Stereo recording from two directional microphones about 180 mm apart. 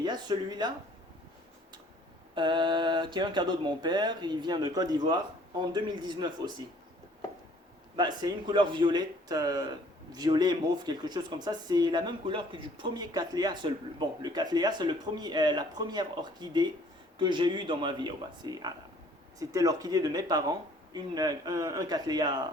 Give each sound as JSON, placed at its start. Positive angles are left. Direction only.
{"t": 0.0, "sound": "speech", "side_deg": -25}
{"t": 2.3, "sound": "speech", "side_deg": -25}
{"t": 7.9, "sound": "speech", "side_deg": -25}